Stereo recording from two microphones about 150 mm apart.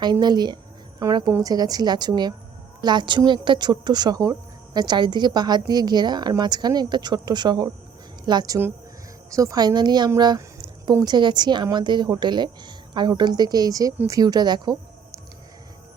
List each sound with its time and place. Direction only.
0.0 s a woman's voice: 30° right (ahead or behind)
10.2 s a sound: 30° right (ahead or behind)
10.9 s speech: 25° right (ahead or behind)